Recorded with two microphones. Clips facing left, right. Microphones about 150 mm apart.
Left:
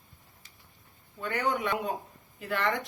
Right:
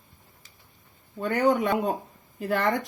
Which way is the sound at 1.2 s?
45° right (ahead or behind).